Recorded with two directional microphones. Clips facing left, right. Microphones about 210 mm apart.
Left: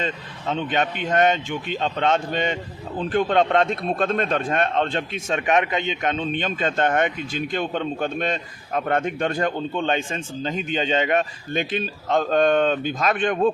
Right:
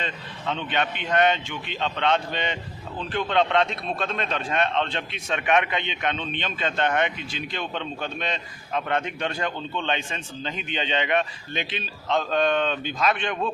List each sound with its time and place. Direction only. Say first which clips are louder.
0.0 s speech: left 4 dB; 45° left (ahead or behind)